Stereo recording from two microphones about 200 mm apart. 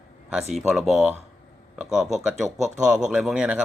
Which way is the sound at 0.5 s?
5° right (ahead or behind).